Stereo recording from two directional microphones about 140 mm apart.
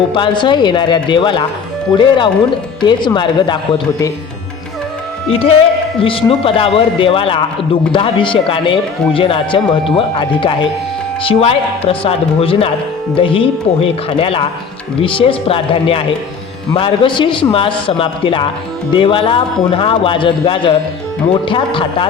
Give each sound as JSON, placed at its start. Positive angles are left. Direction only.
{"t": 0.1, "sound": "a man's voice", "side_deg": 35}
{"t": 5.3, "sound": "a man's voice", "side_deg": 45}